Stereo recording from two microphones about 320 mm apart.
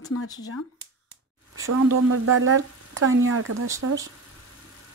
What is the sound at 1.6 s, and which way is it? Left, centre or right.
Speech, right.